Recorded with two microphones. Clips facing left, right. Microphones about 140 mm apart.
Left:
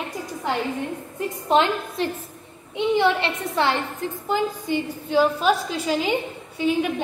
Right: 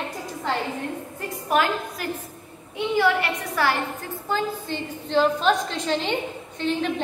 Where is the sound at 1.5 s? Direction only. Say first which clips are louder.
Left 3 dB; 25° left (ahead or behind).